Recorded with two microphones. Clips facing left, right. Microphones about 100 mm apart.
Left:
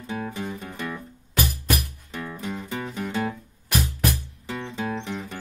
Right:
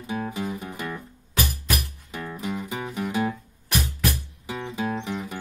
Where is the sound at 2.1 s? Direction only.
5° right (ahead or behind).